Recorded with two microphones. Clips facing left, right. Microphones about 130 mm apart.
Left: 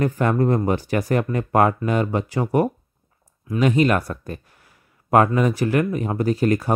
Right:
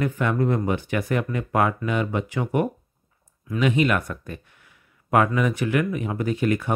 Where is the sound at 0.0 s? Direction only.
40° left (ahead or behind).